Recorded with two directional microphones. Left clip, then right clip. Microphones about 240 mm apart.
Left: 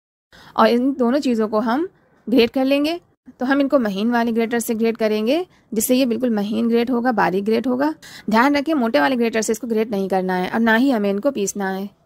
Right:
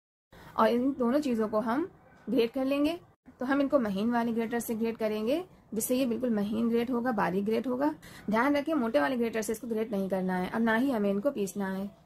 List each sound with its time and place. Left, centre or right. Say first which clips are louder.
0.5 s speech: left 10 dB; left